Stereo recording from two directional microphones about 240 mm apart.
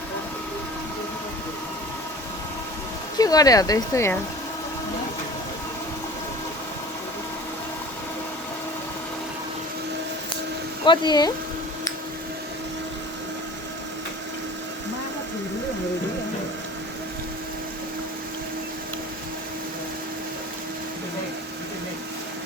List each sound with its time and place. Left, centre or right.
3.2 s speech: centre
10.8 s speech: centre